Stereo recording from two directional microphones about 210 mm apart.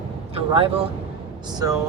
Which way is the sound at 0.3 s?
25° right (ahead or behind).